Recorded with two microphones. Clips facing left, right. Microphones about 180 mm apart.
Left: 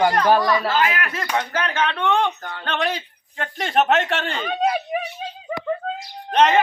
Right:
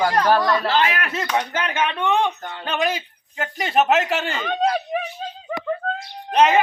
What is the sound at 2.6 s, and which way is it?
A man's voice, 5° right (ahead or behind).